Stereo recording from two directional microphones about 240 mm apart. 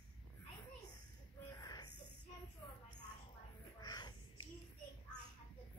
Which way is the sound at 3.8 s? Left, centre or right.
Centre.